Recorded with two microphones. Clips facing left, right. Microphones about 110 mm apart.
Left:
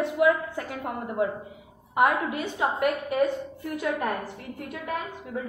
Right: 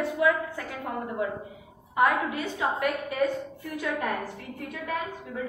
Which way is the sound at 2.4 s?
10° left (ahead or behind).